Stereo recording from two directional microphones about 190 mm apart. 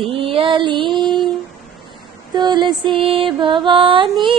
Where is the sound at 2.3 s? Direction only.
25° right (ahead or behind).